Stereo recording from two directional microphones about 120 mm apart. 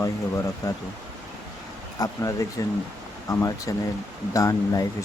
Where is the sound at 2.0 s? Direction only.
30° left (ahead or behind).